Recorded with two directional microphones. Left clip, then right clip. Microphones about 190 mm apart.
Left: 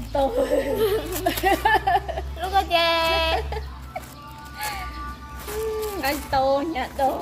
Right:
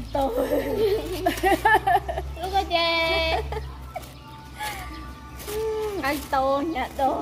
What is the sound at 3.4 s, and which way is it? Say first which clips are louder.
Chicken: even; centre (ahead or behind).